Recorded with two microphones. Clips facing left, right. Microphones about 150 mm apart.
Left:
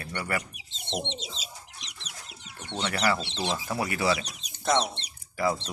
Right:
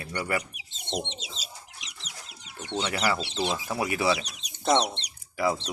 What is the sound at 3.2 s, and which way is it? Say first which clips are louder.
Speech: right 2 dB; 10° right (ahead or behind).